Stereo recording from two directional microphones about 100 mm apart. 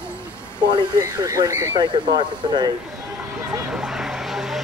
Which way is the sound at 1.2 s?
30° right (ahead or behind).